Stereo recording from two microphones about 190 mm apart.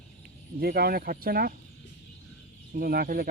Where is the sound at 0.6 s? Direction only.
50° right (ahead or behind).